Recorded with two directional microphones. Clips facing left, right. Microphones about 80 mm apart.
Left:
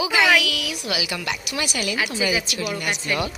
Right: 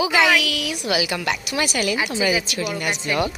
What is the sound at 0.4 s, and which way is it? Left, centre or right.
A woman's voice, right.